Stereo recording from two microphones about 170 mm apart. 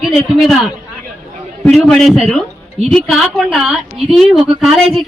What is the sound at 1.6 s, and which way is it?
A woman's voice, 5° left (ahead or behind).